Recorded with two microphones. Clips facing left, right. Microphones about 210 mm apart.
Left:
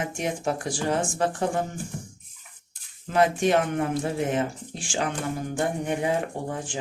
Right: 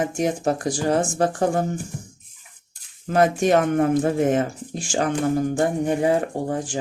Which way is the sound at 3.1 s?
45° right (ahead or behind).